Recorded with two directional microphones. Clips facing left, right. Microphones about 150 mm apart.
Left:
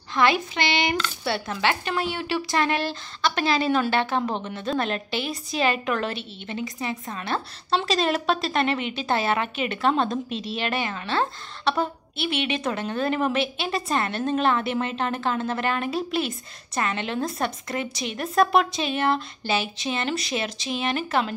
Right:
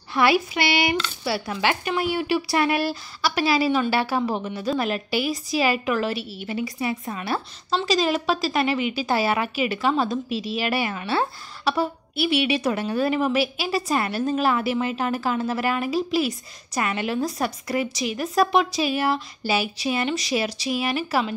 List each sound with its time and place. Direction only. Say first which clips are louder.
0.1 s a woman's voice: right 2 dB; 10° right (ahead or behind)